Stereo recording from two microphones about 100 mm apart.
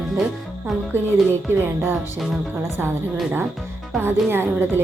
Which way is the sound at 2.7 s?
20° right (ahead or behind).